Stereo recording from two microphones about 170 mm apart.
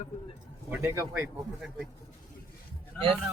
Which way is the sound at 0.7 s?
15° right (ahead or behind).